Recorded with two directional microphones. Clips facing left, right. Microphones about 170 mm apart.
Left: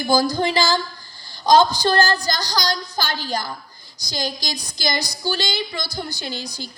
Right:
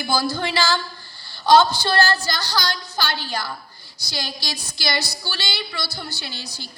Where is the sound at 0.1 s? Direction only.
15° left (ahead or behind).